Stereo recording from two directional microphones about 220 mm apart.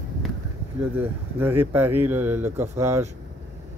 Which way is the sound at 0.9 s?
10° right (ahead or behind).